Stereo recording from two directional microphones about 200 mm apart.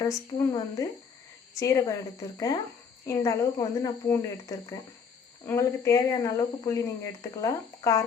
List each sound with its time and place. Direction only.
0.0 s speech: 15° left (ahead or behind)
3.1 s speech: 15° left (ahead or behind)